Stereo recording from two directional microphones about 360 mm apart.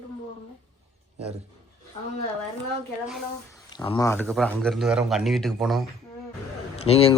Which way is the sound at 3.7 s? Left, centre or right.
Centre.